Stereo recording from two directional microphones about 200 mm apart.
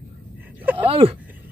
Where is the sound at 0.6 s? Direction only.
10° right (ahead or behind).